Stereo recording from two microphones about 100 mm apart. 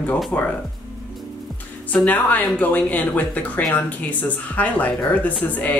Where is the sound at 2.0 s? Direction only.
15° left (ahead or behind).